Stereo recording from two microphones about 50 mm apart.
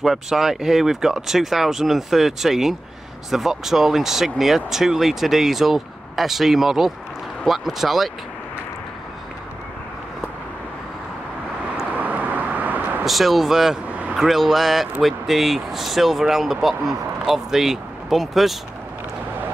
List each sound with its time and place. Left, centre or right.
0.0 s speech: centre
11.9 s vehicle: right
13.0 s speech: centre